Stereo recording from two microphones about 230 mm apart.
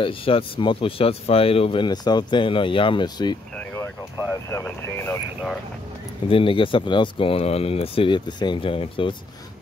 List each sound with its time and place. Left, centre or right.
0.0 s speech: left; by 5.6 s centre
6.2 s speech: left